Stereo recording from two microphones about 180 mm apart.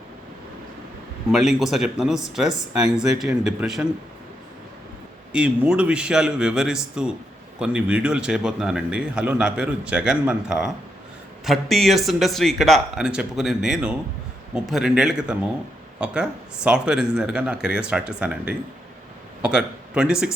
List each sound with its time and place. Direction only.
1.3 s speech: centre (ahead or behind)
5.3 s a man's voice: 5° right (ahead or behind)